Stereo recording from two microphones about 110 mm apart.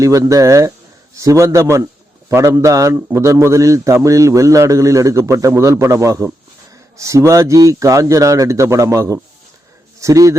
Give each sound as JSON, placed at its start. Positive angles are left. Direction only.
{"t": 0.0, "sound": "a man's voice", "side_deg": -30}